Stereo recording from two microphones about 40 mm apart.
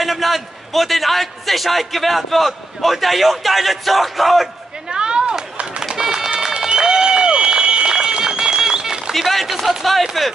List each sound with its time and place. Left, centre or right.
0.0 s a man's voice: centre
4.9 s chop: right
5.9 s run: centre
9.1 s speech: centre